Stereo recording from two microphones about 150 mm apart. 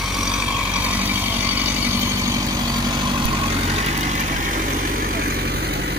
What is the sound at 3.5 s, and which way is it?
Vehicle, 45° right (ahead or behind).